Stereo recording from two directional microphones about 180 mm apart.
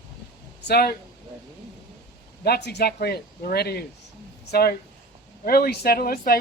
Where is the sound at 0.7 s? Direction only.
60° left (ahead or behind).